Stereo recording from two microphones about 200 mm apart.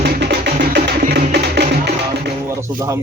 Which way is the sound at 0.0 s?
60° right (ahead or behind).